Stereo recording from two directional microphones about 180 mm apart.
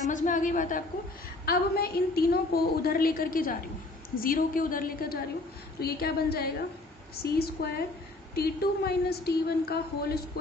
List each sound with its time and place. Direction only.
0.1 s a woman's voice: 45° left (ahead or behind)
1.4 s a woman's voice: 60° left (ahead or behind)